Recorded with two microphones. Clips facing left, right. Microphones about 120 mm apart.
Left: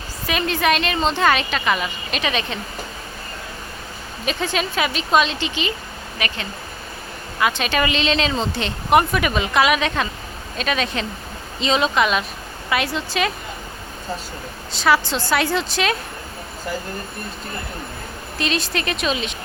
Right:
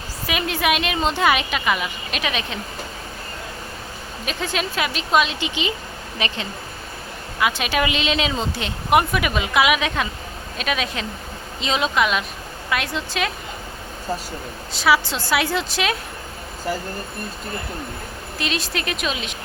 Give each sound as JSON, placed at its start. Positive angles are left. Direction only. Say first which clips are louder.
{"t": 0.3, "sound": "speech", "louder": "left 2 dB", "side_deg": -10}
{"t": 4.3, "sound": "speech", "louder": "left 3 dB", "side_deg": 0}
{"t": 7.3, "sound": "speech", "louder": "left 1 dB", "side_deg": -5}
{"t": 14.7, "sound": "speech", "louder": "left 1 dB", "side_deg": -5}
{"t": 18.3, "sound": "speech", "louder": "left 3 dB", "side_deg": 0}